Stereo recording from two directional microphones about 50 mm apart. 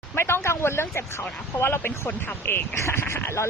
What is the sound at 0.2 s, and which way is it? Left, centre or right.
Speech, left.